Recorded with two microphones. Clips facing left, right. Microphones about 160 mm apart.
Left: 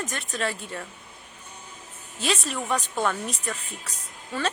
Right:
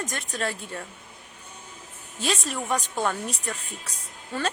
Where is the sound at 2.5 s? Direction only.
10° right (ahead or behind).